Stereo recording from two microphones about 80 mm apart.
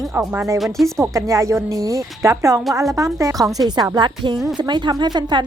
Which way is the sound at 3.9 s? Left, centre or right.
Right.